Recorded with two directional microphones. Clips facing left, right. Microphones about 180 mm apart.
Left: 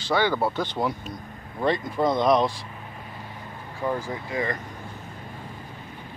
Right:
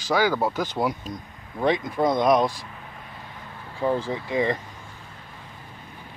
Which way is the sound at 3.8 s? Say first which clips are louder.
Right 4 dB; 25° right (ahead or behind).